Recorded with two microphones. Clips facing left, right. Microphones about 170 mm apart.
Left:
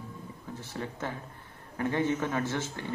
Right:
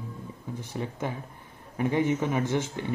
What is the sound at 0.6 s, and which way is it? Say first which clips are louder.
A man's voice: right 3 dB; 15° right (ahead or behind).